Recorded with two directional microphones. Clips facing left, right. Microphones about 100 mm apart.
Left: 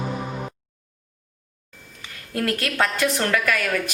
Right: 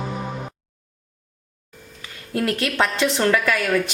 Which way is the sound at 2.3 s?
25° right (ahead or behind).